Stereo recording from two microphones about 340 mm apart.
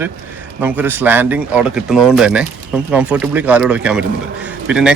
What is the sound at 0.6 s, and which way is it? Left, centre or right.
Speech, centre.